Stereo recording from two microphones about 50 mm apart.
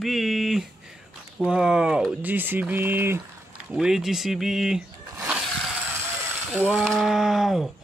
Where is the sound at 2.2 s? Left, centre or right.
Right.